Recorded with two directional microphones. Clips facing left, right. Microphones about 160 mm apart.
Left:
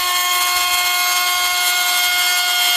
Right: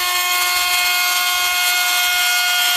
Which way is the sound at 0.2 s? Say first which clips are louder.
Left 1 dB; centre (ahead or behind).